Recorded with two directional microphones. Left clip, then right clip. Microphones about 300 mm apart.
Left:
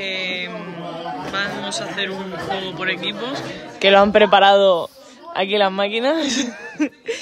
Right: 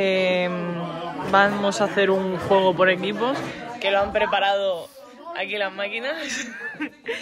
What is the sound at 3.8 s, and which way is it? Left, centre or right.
Speech, left.